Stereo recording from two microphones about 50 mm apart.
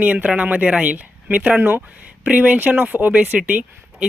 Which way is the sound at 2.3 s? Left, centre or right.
Right.